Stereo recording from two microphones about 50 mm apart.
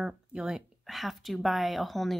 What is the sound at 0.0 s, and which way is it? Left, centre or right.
Speech, centre.